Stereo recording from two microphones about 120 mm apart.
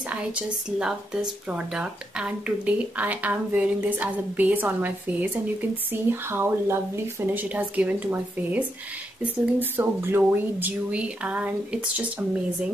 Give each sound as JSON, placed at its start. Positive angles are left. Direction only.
{"t": 0.3, "sound": "speech", "side_deg": -10}